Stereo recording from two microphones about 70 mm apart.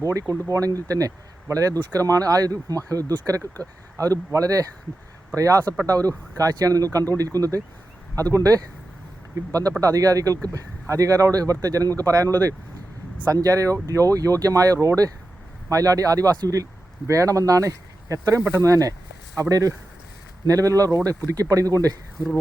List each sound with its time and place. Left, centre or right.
0.0 s speech: right
9.5 s speech: right
17.1 s speech: right